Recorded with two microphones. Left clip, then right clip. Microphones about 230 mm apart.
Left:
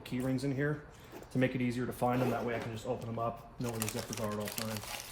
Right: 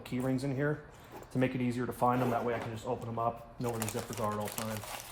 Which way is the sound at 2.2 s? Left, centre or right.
Centre.